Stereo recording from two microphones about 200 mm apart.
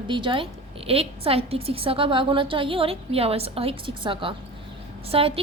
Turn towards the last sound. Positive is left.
turn(degrees=-30)  # may be behind; listen again after turning